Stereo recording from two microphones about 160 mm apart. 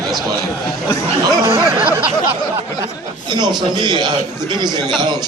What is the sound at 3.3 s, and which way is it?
Speech, 25° right (ahead or behind).